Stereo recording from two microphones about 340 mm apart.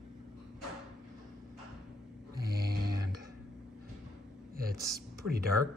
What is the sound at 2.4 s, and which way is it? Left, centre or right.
Snoring, right.